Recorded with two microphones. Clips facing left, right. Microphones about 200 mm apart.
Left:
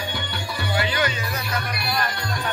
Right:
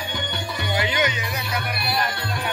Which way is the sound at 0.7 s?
20° right (ahead or behind).